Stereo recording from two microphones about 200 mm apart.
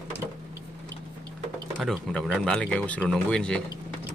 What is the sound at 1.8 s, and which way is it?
Speech, centre (ahead or behind).